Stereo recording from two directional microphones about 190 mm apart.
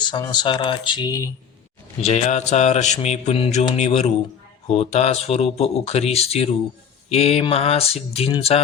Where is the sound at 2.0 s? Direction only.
35° left (ahead or behind).